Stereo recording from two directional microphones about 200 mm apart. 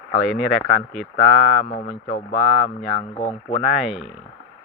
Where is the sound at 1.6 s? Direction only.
35° left (ahead or behind).